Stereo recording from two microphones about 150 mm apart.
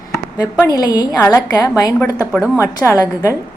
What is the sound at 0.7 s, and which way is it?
A woman's voice, 25° left (ahead or behind).